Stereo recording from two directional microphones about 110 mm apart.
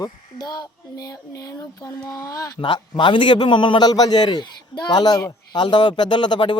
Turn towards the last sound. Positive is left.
turn(degrees=45)  # may be behind; listen again after turning